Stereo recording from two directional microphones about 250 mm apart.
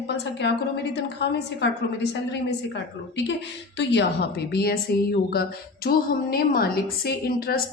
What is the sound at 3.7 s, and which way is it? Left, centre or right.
A woman's voice, left.